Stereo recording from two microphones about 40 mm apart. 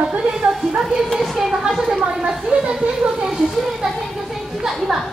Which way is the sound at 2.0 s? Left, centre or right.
Right.